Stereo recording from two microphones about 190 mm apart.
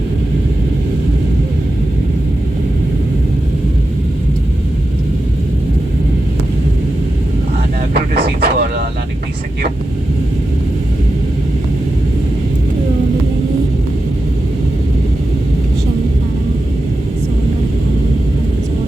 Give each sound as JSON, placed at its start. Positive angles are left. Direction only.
{"t": 7.9, "sound": "vehicle", "side_deg": -55}